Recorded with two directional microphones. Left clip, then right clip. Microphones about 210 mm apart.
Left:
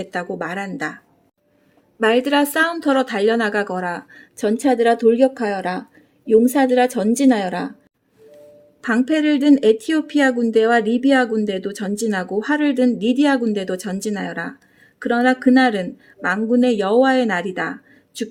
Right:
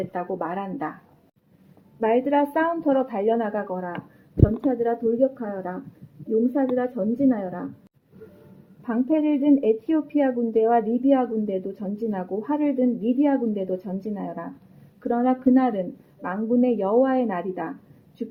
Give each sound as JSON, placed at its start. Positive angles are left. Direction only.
{"t": 0.1, "sound": "speech", "side_deg": 60}
{"t": 2.0, "sound": "a woman's voice", "side_deg": 60}
{"t": 8.9, "sound": "speech", "side_deg": 60}